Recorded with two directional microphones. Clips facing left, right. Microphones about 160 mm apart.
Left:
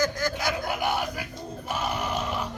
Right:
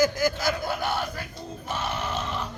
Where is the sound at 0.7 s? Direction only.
15° left (ahead or behind).